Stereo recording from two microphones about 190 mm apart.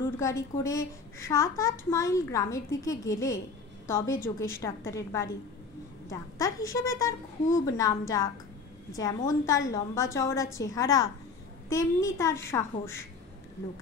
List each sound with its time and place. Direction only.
0.2 s a child's voice: 15° left (ahead or behind)